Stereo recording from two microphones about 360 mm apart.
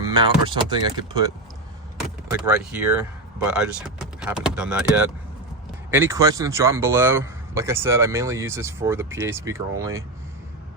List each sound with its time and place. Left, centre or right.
0.1 s speech: centre
2.0 s vehicle: centre
3.4 s speech: centre